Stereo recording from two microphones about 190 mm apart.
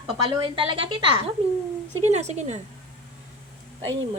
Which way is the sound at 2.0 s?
35° right (ahead or behind).